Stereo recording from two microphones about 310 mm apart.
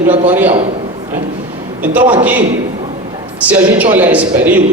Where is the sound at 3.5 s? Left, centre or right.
Centre.